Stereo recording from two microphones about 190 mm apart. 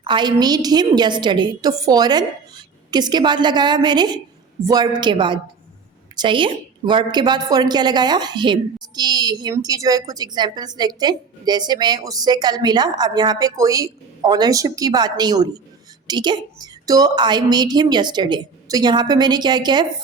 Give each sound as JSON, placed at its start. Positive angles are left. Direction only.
{"t": 0.0, "sound": "a woman's voice", "side_deg": -25}